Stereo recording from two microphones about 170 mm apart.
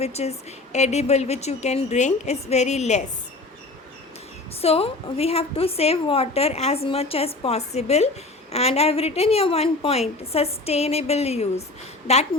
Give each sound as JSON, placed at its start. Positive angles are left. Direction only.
{"t": 0.0, "sound": "a woman's voice", "side_deg": 40}
{"t": 4.6, "sound": "a woman's voice", "side_deg": 35}